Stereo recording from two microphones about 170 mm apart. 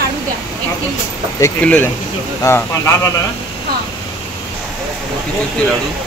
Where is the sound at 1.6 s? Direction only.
10° left (ahead or behind).